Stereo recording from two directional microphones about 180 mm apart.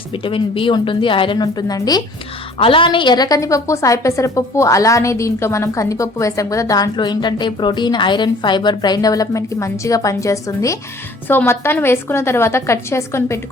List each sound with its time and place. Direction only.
0.1 s a woman's voice: 30° left (ahead or behind)